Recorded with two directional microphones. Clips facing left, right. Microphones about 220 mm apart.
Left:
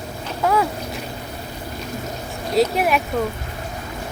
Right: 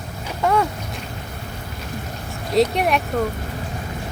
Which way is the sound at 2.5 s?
5° left (ahead or behind).